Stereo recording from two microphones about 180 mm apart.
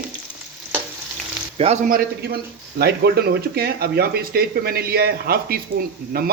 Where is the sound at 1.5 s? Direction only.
35° right (ahead or behind).